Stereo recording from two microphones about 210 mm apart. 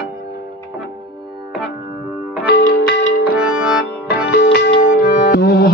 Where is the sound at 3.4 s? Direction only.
5° right (ahead or behind).